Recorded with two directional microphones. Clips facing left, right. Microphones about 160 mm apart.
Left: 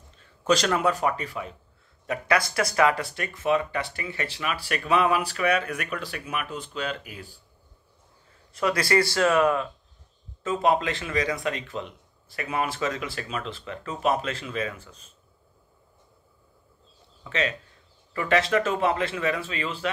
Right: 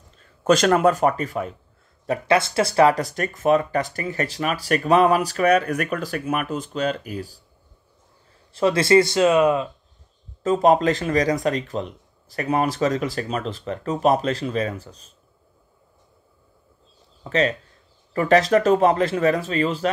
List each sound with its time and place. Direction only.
0.4 s speech: 50° right (ahead or behind)
2.0 s speech: 25° right (ahead or behind)
8.5 s speech: 25° right (ahead or behind)
10.4 s speech: 40° right (ahead or behind)
17.2 s speech: 40° right (ahead or behind)